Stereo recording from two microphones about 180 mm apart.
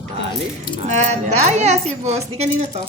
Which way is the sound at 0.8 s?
40° right (ahead or behind).